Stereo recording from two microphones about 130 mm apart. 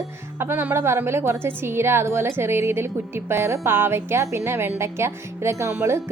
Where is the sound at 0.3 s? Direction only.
15° right (ahead or behind).